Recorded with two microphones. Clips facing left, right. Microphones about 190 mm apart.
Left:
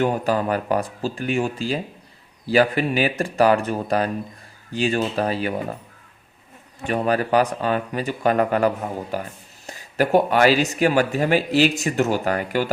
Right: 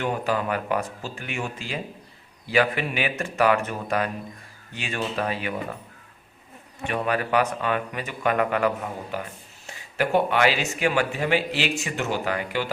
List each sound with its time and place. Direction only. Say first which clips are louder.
0.0 s a man's voice: left 5 dB; 40° left (ahead or behind)
6.8 s a man's voice: left 4 dB; 35° left (ahead or behind)